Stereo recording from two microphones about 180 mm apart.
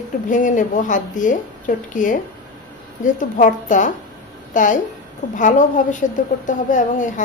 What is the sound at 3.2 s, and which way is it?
A woman's voice, 45° left (ahead or behind).